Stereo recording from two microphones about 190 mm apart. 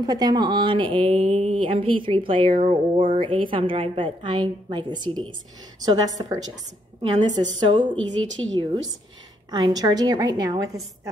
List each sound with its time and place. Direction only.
0.0 s speech: 20° right (ahead or behind)
8.2 s a woman's voice: 90° right
9.5 s speech: 20° right (ahead or behind)